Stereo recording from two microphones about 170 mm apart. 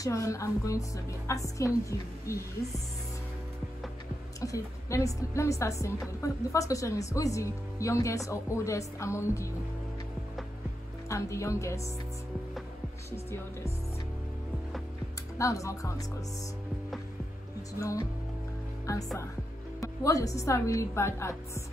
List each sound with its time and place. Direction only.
0.0 s speech: 20° left (ahead or behind)
4.4 s a woman's voice: 20° left (ahead or behind)
11.1 s a woman's voice: 20° left (ahead or behind)
15.3 s speech: 20° left (ahead or behind)
17.7 s a woman's voice: 20° left (ahead or behind)